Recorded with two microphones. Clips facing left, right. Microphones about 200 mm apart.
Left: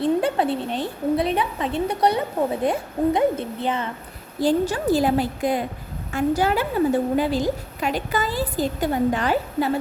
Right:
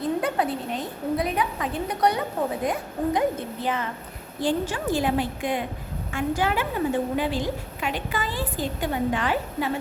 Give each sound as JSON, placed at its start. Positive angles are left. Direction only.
{"t": 0.2, "sound": "a woman's voice", "side_deg": 30}
{"t": 4.4, "sound": "a woman's voice", "side_deg": 40}